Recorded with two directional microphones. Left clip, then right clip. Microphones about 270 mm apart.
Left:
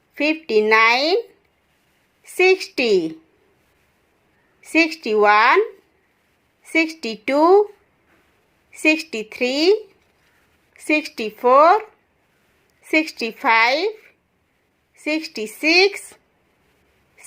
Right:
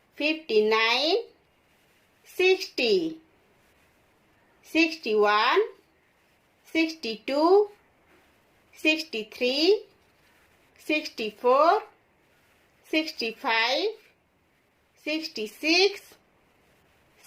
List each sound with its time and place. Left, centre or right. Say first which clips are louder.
0.2 s speech: left 6 dB; left
2.3 s speech: left 7 dB; left
4.6 s speech: left 6 dB; left
6.7 s speech: left 7 dB; left
8.8 s speech: left 7 dB; left
10.8 s speech: left 7 dB; left
12.8 s speech: left 8 dB; left
15.0 s speech: left 7 dB; left